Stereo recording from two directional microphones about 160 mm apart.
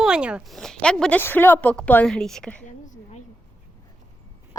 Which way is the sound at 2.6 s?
50° left (ahead or behind).